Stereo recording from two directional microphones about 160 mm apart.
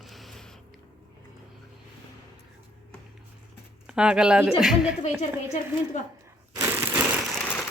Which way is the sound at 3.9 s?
5° right (ahead or behind).